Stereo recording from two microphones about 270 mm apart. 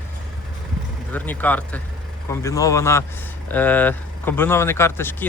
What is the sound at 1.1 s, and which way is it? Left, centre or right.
Speech, centre.